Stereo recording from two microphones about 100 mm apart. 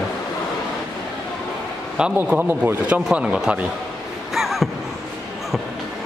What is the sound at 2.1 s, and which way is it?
Speech, 20° right (ahead or behind).